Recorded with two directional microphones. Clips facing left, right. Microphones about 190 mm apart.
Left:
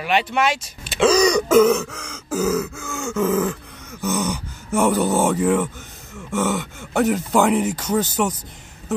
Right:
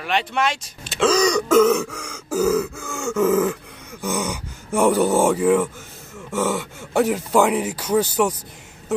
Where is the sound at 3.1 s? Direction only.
5° right (ahead or behind).